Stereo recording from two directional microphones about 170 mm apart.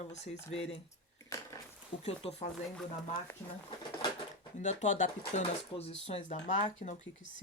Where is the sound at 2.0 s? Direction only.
35° left (ahead or behind).